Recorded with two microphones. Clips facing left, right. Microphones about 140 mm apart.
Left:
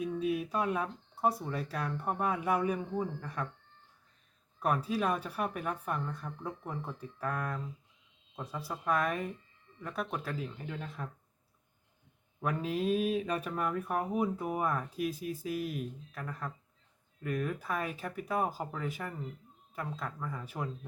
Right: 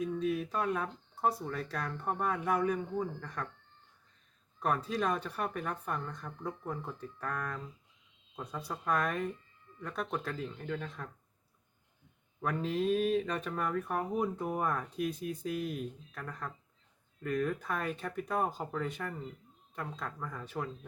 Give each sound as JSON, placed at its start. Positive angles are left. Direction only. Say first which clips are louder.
{"t": 0.0, "sound": "speech", "louder": "even", "side_deg": 10}
{"t": 4.6, "sound": "speech", "louder": "left 1 dB", "side_deg": 5}
{"t": 12.4, "sound": "speech", "louder": "even", "side_deg": 10}